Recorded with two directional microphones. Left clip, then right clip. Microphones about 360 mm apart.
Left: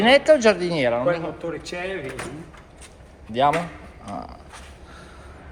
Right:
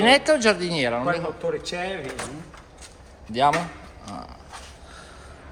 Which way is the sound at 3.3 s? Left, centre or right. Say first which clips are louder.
Left 1 dB; centre.